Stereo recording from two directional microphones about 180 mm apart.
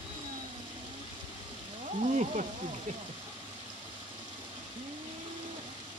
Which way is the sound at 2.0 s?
40° right (ahead or behind).